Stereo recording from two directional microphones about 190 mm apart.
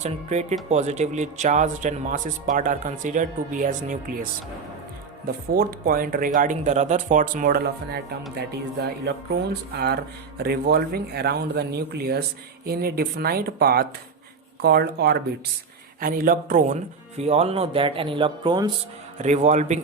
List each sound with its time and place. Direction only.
0.0 s speech: 35° right (ahead or behind)
5.5 s speech: 50° right (ahead or behind); by 18.7 s 25° right (ahead or behind)
19.2 s speech: 40° right (ahead or behind)